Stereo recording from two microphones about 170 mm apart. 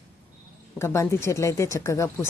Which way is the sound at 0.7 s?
15° left (ahead or behind).